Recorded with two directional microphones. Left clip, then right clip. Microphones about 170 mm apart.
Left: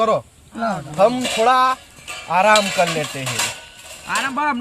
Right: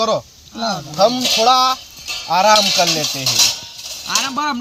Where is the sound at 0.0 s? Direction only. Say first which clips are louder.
Even; 15° left (ahead or behind).